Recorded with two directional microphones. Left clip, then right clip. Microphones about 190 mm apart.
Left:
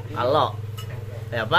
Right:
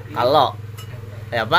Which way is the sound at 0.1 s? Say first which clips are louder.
Right 5 dB; 40° right (ahead or behind).